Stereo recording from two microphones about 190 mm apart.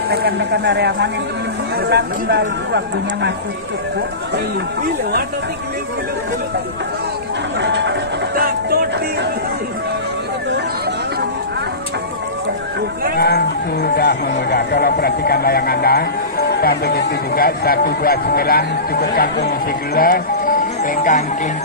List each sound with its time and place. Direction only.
0.1 s speech: 60° right (ahead or behind)
7.6 s speech: 70° right (ahead or behind)
8.4 s music: 55° right (ahead or behind)
13.8 s speech: 55° left (ahead or behind)